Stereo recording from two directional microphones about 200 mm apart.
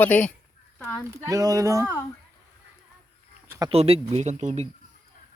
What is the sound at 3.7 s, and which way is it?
Speech, 30° right (ahead or behind).